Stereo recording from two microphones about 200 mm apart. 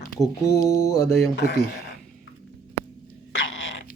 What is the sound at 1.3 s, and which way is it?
Speech, 55° left (ahead or behind).